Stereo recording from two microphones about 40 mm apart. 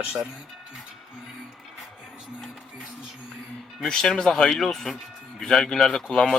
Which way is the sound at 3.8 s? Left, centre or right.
Centre.